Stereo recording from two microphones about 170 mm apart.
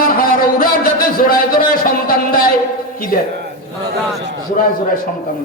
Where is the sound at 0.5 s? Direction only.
55° left (ahead or behind).